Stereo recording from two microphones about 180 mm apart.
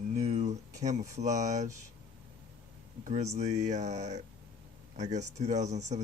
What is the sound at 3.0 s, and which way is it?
Speech, 40° right (ahead or behind).